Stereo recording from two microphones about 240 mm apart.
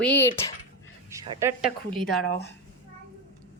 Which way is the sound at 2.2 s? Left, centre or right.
Left.